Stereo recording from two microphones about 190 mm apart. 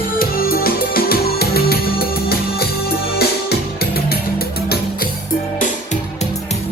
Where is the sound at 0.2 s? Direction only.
50° left (ahead or behind).